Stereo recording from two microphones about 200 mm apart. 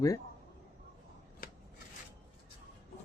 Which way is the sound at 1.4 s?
50° left (ahead or behind).